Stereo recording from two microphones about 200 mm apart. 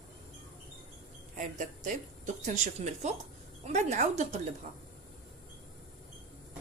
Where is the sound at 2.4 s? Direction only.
35° right (ahead or behind).